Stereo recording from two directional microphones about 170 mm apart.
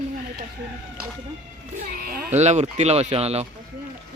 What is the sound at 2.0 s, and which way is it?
Speech, 60° right (ahead or behind).